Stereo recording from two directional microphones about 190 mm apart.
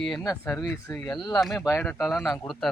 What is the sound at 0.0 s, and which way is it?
Speech, centre (ahead or behind).